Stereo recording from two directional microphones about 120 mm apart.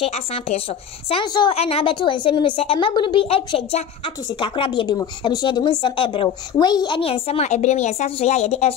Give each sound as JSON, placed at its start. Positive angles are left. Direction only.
{"t": 0.0, "sound": "a woman's voice", "side_deg": 60}
{"t": 1.2, "sound": "a woman's voice", "side_deg": 35}
{"t": 1.5, "sound": "a woman's voice", "side_deg": 55}
{"t": 7.0, "sound": "a woman's voice", "side_deg": 55}